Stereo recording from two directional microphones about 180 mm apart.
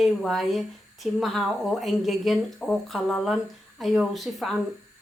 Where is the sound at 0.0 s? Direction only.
Centre (ahead or behind).